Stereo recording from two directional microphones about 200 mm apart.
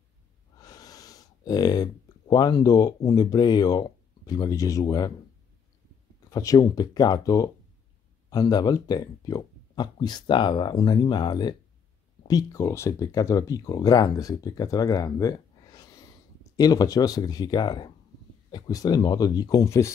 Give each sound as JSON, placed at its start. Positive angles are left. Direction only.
{"t": 0.6, "sound": "speech", "side_deg": 20}
{"t": 6.3, "sound": "speech", "side_deg": 15}